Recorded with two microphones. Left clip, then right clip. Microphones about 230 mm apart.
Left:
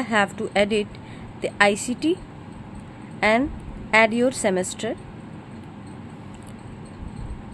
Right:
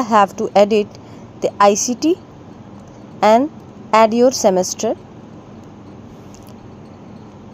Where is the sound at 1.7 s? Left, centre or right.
Centre.